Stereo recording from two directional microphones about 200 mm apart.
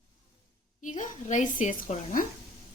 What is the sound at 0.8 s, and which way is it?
A woman's voice, 40° left (ahead or behind).